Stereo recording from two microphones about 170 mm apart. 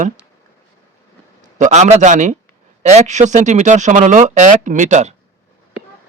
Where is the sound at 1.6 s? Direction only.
45° right (ahead or behind).